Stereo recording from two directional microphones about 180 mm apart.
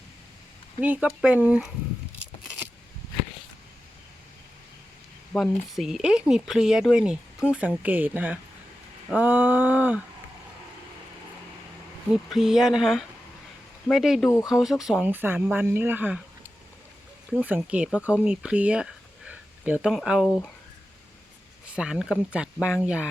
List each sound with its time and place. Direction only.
0.8 s speech: 5° right (ahead or behind)
5.3 s speech: centre (ahead or behind)
12.1 s speech: centre (ahead or behind)
17.3 s speech: 10° right (ahead or behind)
21.8 s speech: 5° right (ahead or behind)